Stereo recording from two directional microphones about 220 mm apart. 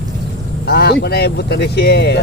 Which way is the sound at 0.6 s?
45° left (ahead or behind).